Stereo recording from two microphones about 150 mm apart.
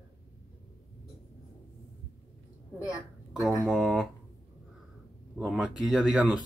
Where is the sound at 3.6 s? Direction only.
Centre (ahead or behind).